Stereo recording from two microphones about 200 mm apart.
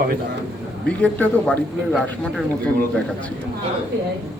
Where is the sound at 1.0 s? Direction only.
5° left (ahead or behind).